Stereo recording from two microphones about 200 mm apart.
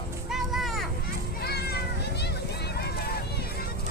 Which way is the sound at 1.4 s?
55° left (ahead or behind).